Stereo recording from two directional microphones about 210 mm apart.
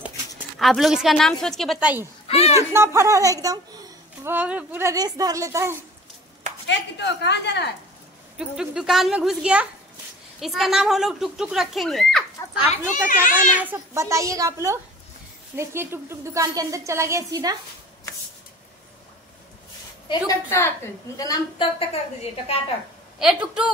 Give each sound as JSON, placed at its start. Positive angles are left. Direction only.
{"t": 0.6, "sound": "speech", "side_deg": 0}
{"t": 2.2, "sound": "speech", "side_deg": 30}
{"t": 2.7, "sound": "a woman's voice", "side_deg": -15}
{"t": 6.7, "sound": "a woman's voice", "side_deg": 55}
{"t": 8.4, "sound": "speech", "side_deg": -5}
{"t": 13.6, "sound": "a woman's voice", "side_deg": -10}
{"t": 20.1, "sound": "a woman's voice", "side_deg": 15}
{"t": 21.7, "sound": "a woman's voice", "side_deg": 30}
{"t": 23.1, "sound": "speech", "side_deg": -5}